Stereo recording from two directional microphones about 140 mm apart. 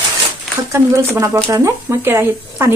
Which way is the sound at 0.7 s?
20° right (ahead or behind).